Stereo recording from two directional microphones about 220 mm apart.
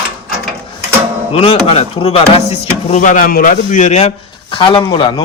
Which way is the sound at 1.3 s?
25° left (ahead or behind).